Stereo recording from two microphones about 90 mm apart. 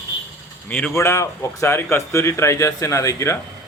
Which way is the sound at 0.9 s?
35° left (ahead or behind).